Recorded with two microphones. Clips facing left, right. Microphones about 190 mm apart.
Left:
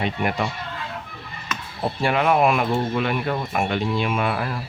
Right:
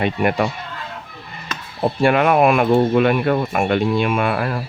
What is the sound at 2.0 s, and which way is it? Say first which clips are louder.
Speech: right 4 dB; 60° right (ahead or behind).